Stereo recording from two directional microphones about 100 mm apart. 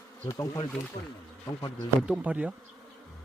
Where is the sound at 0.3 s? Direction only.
35° left (ahead or behind).